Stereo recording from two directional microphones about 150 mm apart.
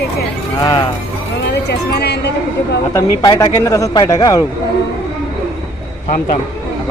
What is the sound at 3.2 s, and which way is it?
A man's voice, 25° left (ahead or behind).